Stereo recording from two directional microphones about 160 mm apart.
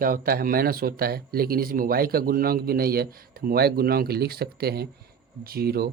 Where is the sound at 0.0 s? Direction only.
65° right (ahead or behind).